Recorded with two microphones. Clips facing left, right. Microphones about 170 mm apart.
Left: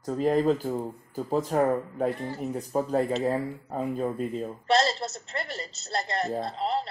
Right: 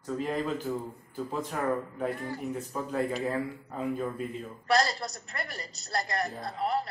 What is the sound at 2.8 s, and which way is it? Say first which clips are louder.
Speech: left 6 dB; 35° left (ahead or behind).